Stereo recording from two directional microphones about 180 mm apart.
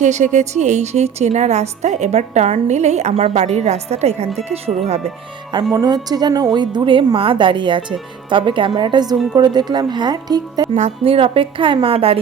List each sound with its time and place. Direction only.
0.0 s a woman's voice: 40° right (ahead or behind)
5.7 s a woman's voice: 20° right (ahead or behind)
10.8 s a woman's voice: 35° right (ahead or behind)